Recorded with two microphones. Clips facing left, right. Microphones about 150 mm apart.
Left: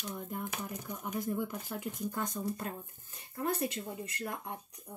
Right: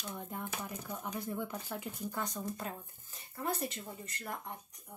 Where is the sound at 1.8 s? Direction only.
50° left (ahead or behind).